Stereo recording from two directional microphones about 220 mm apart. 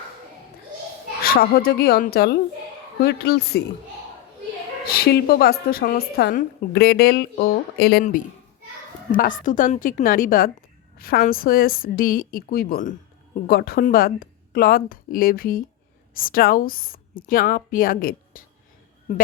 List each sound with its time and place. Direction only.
1.2 s a woman's voice: 45° left (ahead or behind)
4.9 s a woman's voice: 45° left (ahead or behind)